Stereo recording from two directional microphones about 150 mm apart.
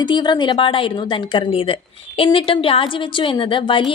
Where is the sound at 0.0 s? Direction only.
30° left (ahead or behind).